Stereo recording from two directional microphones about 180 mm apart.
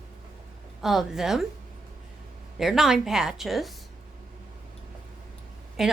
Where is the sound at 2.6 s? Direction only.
Centre (ahead or behind).